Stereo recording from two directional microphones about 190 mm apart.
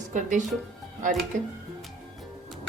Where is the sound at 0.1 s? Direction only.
40° right (ahead or behind).